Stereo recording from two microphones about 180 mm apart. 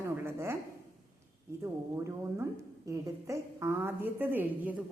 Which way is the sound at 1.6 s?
15° right (ahead or behind).